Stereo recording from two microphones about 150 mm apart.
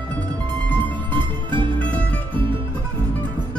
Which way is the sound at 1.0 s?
35° right (ahead or behind).